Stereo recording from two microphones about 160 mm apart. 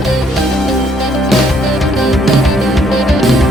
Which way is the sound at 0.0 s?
Centre (ahead or behind).